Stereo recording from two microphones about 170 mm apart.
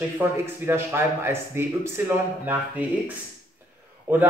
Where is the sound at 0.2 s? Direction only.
15° right (ahead or behind).